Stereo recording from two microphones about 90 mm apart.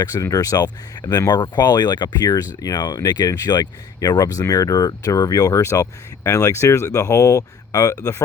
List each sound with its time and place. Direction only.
0.0 s speech: 40° left (ahead or behind)